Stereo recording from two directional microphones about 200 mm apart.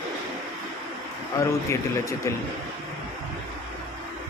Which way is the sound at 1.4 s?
15° left (ahead or behind).